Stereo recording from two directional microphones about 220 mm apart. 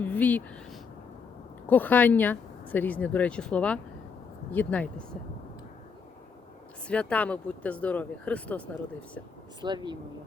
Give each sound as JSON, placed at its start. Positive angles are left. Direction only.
{"t": 0.0, "sound": "speech", "side_deg": 5}
{"t": 6.8, "sound": "speech", "side_deg": 5}
{"t": 9.6, "sound": "speech", "side_deg": -20}